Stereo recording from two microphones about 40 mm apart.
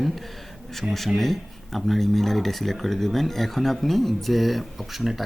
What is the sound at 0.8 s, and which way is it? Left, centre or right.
Speech, right.